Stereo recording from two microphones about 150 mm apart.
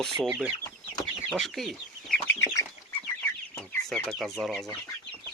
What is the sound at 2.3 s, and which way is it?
Bird, 20° left (ahead or behind).